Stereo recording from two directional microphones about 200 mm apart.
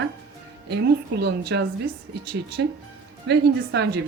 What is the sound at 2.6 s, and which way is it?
Speech, 65° right (ahead or behind).